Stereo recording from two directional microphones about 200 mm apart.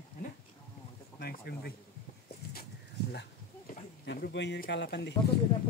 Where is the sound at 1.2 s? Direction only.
50° left (ahead or behind).